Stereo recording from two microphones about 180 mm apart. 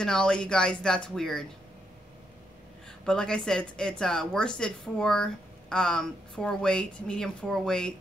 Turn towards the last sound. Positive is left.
turn(degrees=5)  # may be behind; listen again after turning